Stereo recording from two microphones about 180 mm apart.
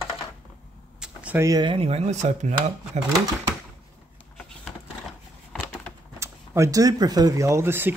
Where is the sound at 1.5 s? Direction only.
25° right (ahead or behind); by 3.1 s 40° right (ahead or behind).